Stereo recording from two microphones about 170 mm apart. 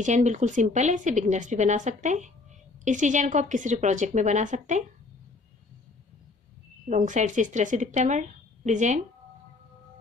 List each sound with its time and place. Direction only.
0.0 s speech: 45° right (ahead or behind)
6.9 s speech: 45° right (ahead or behind)